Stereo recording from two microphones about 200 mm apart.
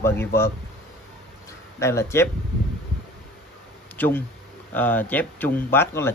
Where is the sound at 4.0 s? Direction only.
10° left (ahead or behind).